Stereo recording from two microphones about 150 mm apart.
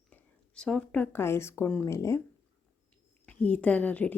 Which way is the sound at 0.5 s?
5° left (ahead or behind).